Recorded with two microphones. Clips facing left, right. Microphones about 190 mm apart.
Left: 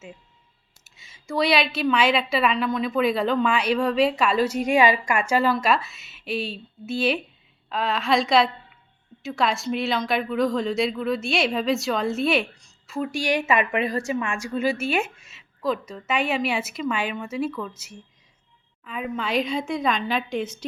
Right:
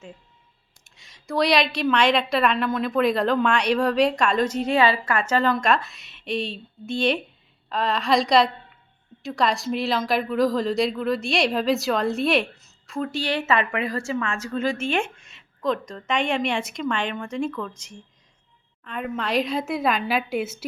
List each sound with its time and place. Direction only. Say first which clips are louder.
0.9 s a woman's voice: right 1 dB; centre (ahead or behind)
13.0 s a woman's voice: left 1 dB; 10° left (ahead or behind); by 20.7 s 5° right (ahead or behind)